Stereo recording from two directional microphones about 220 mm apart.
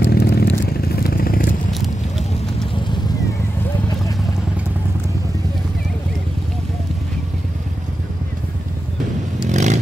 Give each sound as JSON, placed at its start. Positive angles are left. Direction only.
{"t": 0.0, "sound": "chainsaw", "side_deg": 45}
{"t": 0.7, "sound": "vehicle", "side_deg": 40}
{"t": 1.7, "sound": "a sound", "side_deg": 0}
{"t": 9.5, "sound": "vehicle", "side_deg": -35}